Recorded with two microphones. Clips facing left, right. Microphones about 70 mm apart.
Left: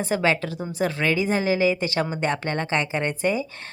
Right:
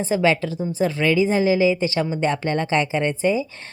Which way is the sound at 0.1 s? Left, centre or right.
Left.